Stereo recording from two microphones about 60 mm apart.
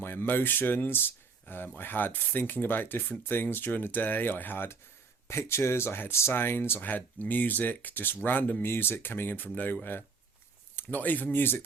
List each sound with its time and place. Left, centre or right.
0.0 s speech: left
10.8 s speech: left